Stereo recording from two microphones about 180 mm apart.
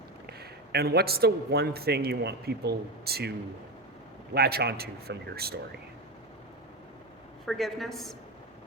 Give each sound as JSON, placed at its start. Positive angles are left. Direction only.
{"t": 0.3, "sound": "a man's voice", "side_deg": -65}
{"t": 4.4, "sound": "a man's voice", "side_deg": -60}
{"t": 7.4, "sound": "a woman's voice", "side_deg": 0}